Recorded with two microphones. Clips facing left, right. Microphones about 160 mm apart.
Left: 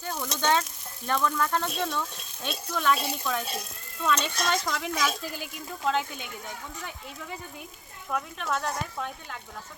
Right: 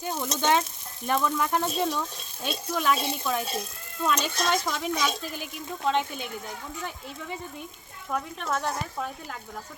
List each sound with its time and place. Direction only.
0.0 s a woman's voice: 20° right (ahead or behind); by 6.2 s centre (ahead or behind)
8.1 s a woman's voice: centre (ahead or behind)